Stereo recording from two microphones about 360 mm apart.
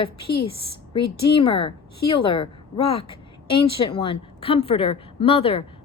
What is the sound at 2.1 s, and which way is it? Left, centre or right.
Speech, centre.